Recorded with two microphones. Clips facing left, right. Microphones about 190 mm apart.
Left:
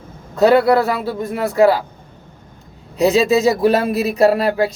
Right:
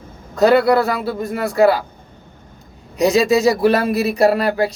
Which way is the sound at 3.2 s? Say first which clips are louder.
Right 1 dB; 5° left (ahead or behind).